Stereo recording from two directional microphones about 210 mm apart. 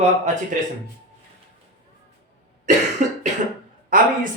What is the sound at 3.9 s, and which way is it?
Speech, 40° right (ahead or behind).